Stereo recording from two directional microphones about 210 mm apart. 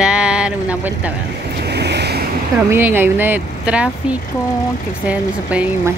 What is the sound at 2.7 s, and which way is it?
Speech, 10° right (ahead or behind).